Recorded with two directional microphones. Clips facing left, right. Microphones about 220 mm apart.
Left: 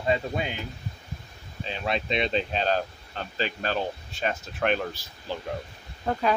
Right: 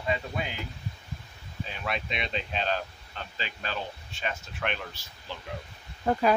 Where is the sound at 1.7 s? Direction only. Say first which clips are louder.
Left 6 dB; 30° left (ahead or behind).